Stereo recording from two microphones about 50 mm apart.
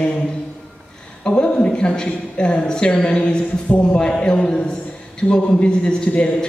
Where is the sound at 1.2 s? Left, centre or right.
Centre.